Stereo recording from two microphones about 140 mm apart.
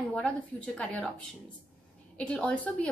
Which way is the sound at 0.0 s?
5° left (ahead or behind).